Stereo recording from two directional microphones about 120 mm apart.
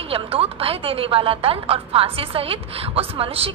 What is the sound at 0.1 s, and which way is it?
A woman's voice, 55° right (ahead or behind).